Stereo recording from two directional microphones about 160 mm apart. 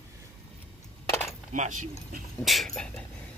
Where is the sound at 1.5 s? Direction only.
50° right (ahead or behind).